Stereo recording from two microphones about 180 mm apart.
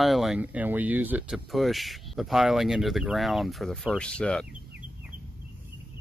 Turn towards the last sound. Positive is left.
turn(degrees=5)  # may be behind; listen again after turning